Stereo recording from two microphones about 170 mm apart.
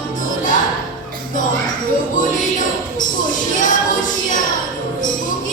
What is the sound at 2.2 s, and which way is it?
Music, 50° left (ahead or behind).